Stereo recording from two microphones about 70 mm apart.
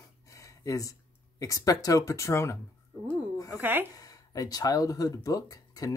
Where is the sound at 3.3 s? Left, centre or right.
Left.